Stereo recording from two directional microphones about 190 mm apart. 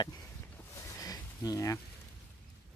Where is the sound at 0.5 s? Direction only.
20° left (ahead or behind).